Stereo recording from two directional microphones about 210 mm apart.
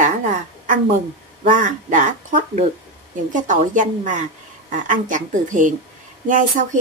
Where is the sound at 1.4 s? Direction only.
35° right (ahead or behind).